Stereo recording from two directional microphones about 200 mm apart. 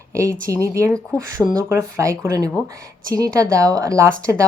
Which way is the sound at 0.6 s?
15° right (ahead or behind).